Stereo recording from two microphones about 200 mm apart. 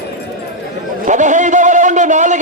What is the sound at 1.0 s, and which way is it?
A man's voice, 40° right (ahead or behind).